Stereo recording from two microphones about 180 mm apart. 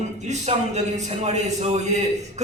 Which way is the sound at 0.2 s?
40° right (ahead or behind).